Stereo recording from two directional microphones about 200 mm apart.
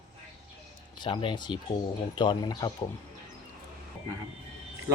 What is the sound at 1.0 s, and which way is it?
Speech, 25° left (ahead or behind).